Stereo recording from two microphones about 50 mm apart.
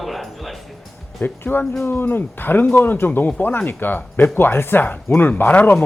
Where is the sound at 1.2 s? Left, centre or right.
Left.